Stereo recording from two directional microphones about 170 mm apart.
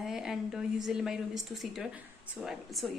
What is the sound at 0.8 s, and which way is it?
A woman's voice, 5° right (ahead or behind).